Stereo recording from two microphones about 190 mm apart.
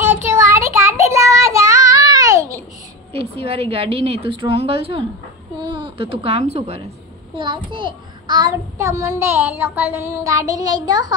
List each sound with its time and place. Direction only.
0.0 s child singing: 10° right (ahead or behind)
3.1 s a woman's voice: 30° right (ahead or behind)